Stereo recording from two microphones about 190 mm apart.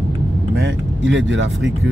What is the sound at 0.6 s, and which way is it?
Speech, 80° right.